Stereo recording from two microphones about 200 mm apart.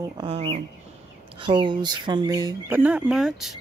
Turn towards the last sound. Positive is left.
turn(degrees=0)  # may be behind; listen again after turning